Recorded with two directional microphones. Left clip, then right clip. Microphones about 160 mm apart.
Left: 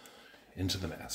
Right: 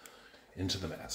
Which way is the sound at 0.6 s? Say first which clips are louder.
Even; 10° left (ahead or behind).